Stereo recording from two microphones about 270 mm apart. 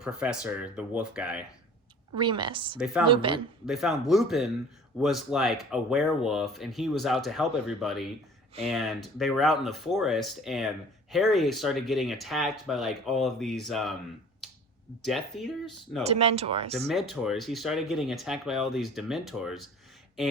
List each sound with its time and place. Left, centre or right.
0.0 s speech: centre
2.1 s a woman's voice: centre
2.7 s speech: centre
3.1 s speech: centre
3.7 s speech: centre
15.0 s speech: centre
16.0 s speech: right
16.9 s speech: centre